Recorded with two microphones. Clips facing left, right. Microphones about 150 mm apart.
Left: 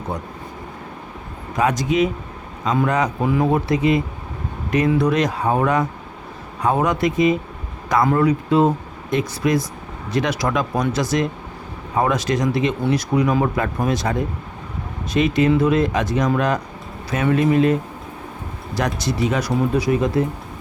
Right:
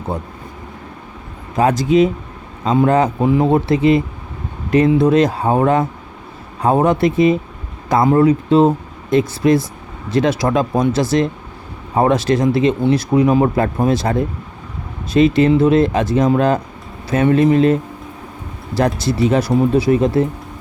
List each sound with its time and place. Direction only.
1.5 s speech: 30° right (ahead or behind)
15.1 s speech: 30° right (ahead or behind)
19.0 s speech: 30° right (ahead or behind)